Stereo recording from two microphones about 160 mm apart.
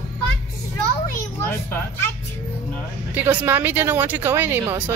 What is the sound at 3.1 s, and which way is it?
Speech, 10° right (ahead or behind).